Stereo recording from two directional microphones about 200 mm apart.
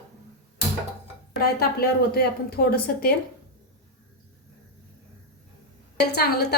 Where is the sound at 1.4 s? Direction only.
50° left (ahead or behind).